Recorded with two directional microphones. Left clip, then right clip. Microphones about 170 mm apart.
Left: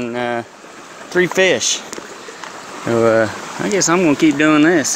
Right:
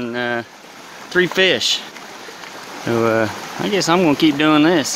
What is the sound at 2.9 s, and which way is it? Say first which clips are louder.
Speech: left 3 dB; 5° right (ahead or behind).